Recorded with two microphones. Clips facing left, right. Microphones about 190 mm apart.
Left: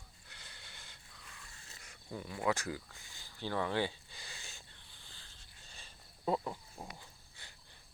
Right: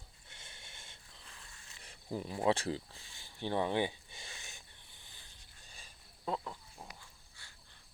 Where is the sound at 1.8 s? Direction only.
30° right (ahead or behind).